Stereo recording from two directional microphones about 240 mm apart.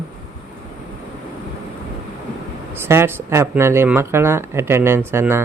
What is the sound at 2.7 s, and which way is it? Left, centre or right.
A man's voice, centre.